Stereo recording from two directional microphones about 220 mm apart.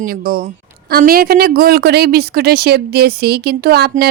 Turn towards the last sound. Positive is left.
turn(degrees=-45)  # may be behind; listen again after turning